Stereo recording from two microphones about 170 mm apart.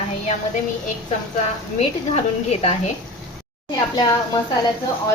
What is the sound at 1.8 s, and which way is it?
Stir, 40° left (ahead or behind).